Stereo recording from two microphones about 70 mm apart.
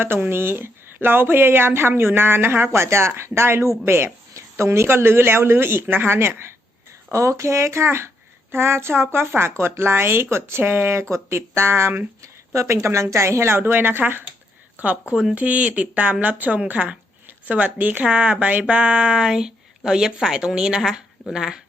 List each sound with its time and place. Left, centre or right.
0.3 s speech: right
12.2 s speech: right
15.1 s a woman's voice: centre
15.4 s a woman's voice: centre